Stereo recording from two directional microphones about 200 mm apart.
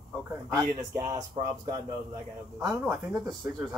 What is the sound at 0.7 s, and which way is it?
Speech, 15° right (ahead or behind).